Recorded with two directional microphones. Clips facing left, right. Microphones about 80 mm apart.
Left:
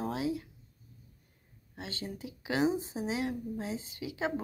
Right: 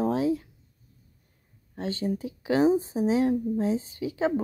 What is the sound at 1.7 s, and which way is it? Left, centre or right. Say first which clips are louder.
Speech: right 12 dB; right.